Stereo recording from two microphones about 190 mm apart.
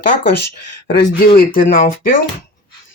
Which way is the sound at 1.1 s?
50° left (ahead or behind).